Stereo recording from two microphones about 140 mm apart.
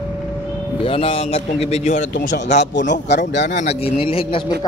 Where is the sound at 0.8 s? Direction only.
40° left (ahead or behind); by 3.7 s 65° left (ahead or behind).